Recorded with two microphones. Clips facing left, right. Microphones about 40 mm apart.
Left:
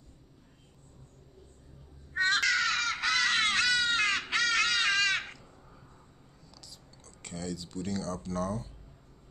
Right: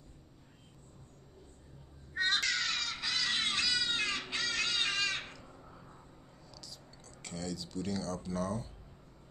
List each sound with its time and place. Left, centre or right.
2.1 s crow: left
6.5 s a sound: centre
8.2 s speech: centre